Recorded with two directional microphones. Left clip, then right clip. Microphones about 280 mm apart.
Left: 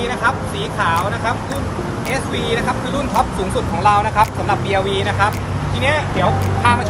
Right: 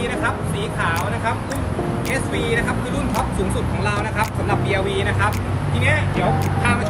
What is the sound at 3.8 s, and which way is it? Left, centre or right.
Speech, centre.